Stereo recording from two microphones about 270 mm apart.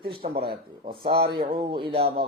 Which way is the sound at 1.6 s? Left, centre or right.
Centre.